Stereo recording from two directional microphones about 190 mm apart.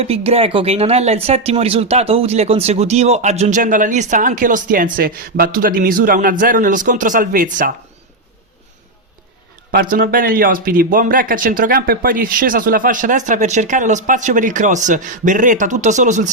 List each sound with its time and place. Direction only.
0.0 s speech: 30° right (ahead or behind)
9.7 s speech: 50° right (ahead or behind)